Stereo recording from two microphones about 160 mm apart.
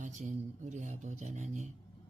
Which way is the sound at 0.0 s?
50° right (ahead or behind).